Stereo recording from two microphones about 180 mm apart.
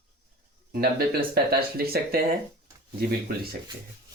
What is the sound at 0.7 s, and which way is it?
Speech, 55° right (ahead or behind).